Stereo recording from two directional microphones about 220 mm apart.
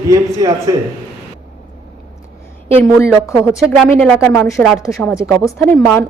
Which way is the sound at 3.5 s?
5° left (ahead or behind).